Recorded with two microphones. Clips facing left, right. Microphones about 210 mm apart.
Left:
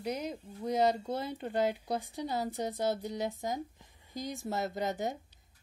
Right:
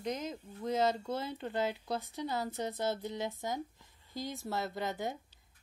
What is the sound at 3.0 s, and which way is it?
Speech, 45° left (ahead or behind).